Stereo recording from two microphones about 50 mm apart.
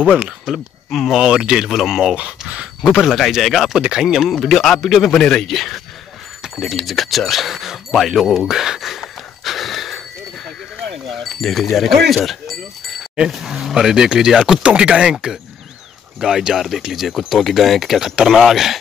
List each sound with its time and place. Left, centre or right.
0.5 s speech: centre
1.1 s speech: centre
2.1 s speech: right
3.1 s speech: centre
4.2 s speech: centre
10.9 s a sound: centre
11.7 s speech: centre
13.3 s speech: centre; by 15.1 s right
16.2 s speech: centre